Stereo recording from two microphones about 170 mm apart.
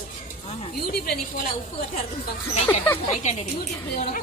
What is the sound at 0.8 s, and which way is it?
Speech, 65° left (ahead or behind).